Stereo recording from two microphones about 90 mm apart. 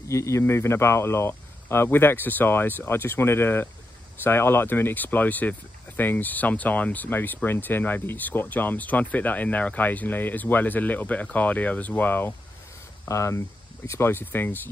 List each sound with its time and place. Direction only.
0.1 s speech: 35° left (ahead or behind)
13.1 s speech: 35° left (ahead or behind)